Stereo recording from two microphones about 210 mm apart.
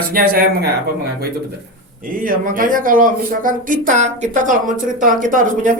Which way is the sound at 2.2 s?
40° right (ahead or behind).